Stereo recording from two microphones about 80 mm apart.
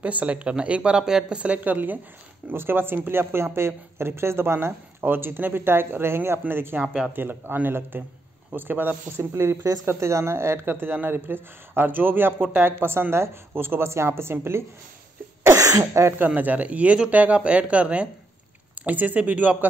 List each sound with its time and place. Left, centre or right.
0.0 s speech: centre
15.5 s speech: right
16.2 s speech: right